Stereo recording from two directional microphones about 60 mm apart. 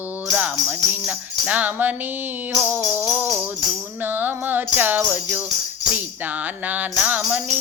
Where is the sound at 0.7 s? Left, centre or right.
Right.